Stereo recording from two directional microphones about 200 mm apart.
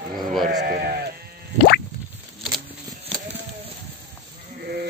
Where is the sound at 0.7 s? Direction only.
50° right (ahead or behind).